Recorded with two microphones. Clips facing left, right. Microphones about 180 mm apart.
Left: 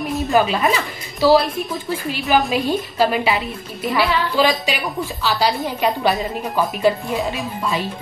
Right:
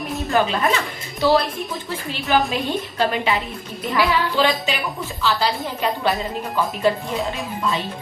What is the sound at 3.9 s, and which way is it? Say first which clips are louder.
Speech: left 1 dB; 15° left (ahead or behind).